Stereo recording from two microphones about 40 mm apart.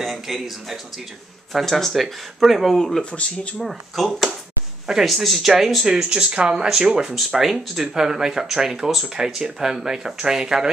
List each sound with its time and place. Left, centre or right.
0.0 s speech: centre
3.0 s speech: left
3.6 s speech: centre
5.9 s speech: right
7.2 s speech: centre